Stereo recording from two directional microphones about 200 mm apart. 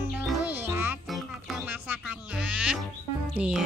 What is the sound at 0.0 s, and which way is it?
Music, 10° right (ahead or behind).